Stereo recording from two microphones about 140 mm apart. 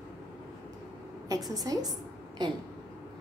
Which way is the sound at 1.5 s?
25° right (ahead or behind).